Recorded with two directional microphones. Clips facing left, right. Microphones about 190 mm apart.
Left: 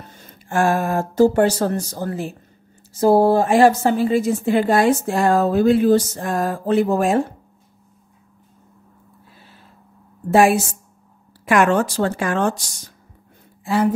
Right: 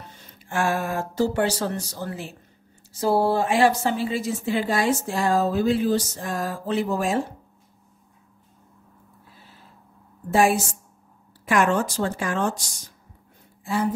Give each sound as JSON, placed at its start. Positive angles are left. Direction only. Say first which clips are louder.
{"t": 0.1, "sound": "a woman's voice", "louder": "left 7 dB", "side_deg": 45}
{"t": 10.3, "sound": "speech", "louder": "left 5 dB", "side_deg": 70}